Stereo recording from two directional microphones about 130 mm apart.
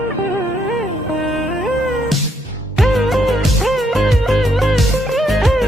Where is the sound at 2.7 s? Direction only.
Centre (ahead or behind).